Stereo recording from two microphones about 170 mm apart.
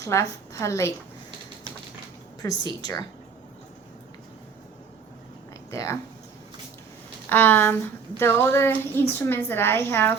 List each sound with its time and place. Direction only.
0.0 s a woman's voice: 20° left (ahead or behind)
2.4 s a woman's voice: 25° left (ahead or behind)
5.7 s a woman's voice: 15° left (ahead or behind)
7.3 s a woman's voice: 10° left (ahead or behind)